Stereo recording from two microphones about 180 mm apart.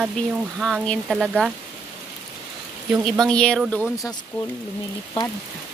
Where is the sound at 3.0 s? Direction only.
Centre (ahead or behind).